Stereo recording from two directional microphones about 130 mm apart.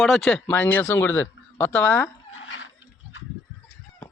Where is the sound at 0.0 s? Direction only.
Centre (ahead or behind).